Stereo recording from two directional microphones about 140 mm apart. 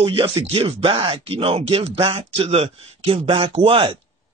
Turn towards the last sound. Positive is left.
turn(degrees=-40)  # may be behind; listen again after turning